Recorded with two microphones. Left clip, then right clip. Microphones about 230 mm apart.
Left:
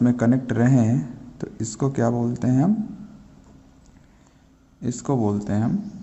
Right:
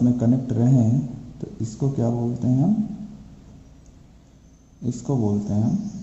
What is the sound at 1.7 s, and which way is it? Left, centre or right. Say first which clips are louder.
Speech: left 3 dB; left.